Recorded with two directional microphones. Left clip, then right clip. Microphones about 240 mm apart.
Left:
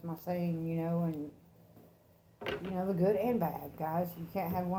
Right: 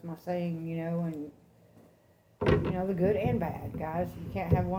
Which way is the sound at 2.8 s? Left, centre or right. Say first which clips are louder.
Right 2 dB; left.